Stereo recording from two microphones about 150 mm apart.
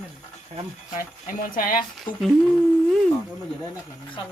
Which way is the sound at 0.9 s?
65° left (ahead or behind).